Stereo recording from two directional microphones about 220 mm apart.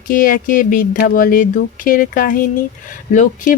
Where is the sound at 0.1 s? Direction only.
40° left (ahead or behind).